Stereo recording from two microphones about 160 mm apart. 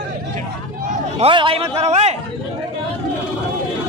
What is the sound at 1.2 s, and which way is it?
Speech, 35° right (ahead or behind).